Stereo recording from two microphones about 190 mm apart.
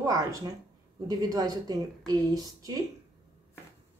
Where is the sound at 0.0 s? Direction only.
20° right (ahead or behind).